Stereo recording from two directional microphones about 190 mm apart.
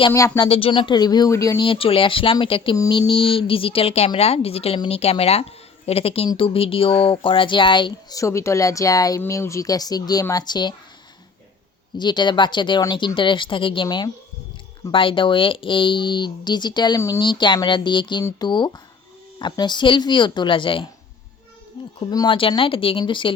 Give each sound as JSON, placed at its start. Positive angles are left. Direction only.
{"t": 0.1, "sound": "speech", "side_deg": 15}
{"t": 0.4, "sound": "speech", "side_deg": 30}
{"t": 11.9, "sound": "speech", "side_deg": 25}
{"t": 22.1, "sound": "speech", "side_deg": 25}